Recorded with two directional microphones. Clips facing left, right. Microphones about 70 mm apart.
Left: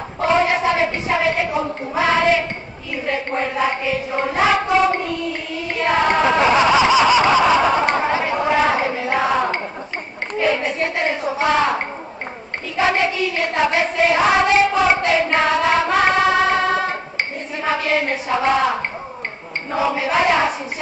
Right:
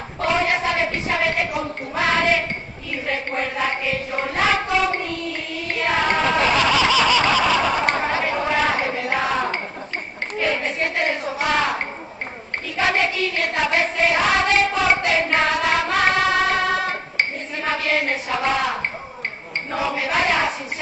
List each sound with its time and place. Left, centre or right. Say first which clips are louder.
0.2 s child singing: left 4 dB; centre
3.3 s a sound: left 4 dB; centre
4.2 s child singing: left 4 dB; centre
5.9 s snicker: left 4 dB; centre
10.4 s clapping: left 4 dB; centre
10.8 s a sound: left 2 dB; centre
11.3 s speech: left 5 dB; left
12.7 s child singing: left 3 dB; centre
15.0 s hands: left 2 dB; left
15.9 s a sound: left 3 dB; centre
19.7 s hands: left 4 dB; left
20.2 s a woman's voice: left 4 dB; centre